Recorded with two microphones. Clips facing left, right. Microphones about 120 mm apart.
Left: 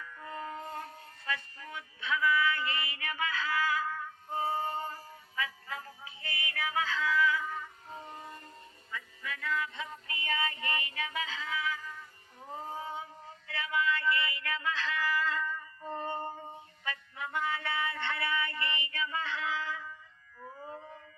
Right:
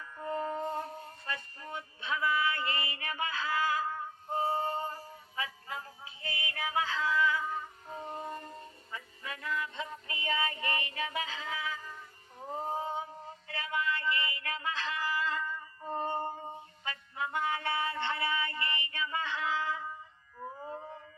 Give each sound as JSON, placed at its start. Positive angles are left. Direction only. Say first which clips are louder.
{"t": 0.0, "sound": "music", "louder": "right 6 dB", "side_deg": -30}
{"t": 8.0, "sound": "a sound", "louder": "right 6 dB", "side_deg": -35}
{"t": 8.9, "sound": "music", "louder": "left 2 dB", "side_deg": -35}
{"t": 12.5, "sound": "a sound", "louder": "right 4 dB", "side_deg": -30}
{"t": 16.8, "sound": "music", "louder": "right 2 dB", "side_deg": -30}
{"t": 18.9, "sound": "female singing", "louder": "even", "side_deg": -25}
{"t": 20.4, "sound": "howl", "louder": "right 3 dB", "side_deg": -30}